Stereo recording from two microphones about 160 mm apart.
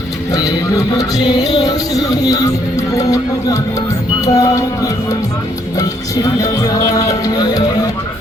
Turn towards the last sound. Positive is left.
turn(degrees=25)  # may be behind; listen again after turning